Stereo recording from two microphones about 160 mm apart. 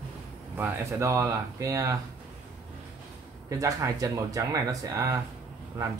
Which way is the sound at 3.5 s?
20° right (ahead or behind).